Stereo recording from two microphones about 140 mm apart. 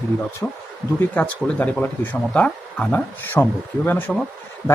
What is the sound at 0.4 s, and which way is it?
Speech, 15° left (ahead or behind).